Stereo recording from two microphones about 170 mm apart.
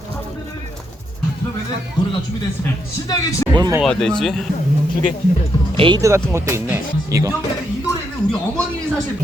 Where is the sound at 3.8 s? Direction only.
5° left (ahead or behind).